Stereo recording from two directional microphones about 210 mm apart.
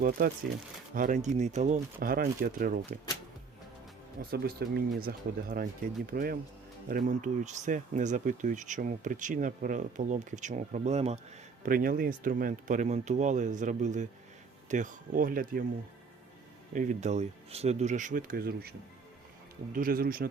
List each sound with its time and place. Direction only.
0.9 s speech: 35° right (ahead or behind)
4.2 s speech: 45° right (ahead or behind)
16.7 s speech: 35° right (ahead or behind)
19.7 s speech: 45° right (ahead or behind)